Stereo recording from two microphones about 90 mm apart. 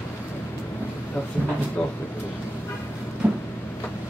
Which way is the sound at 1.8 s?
15° left (ahead or behind).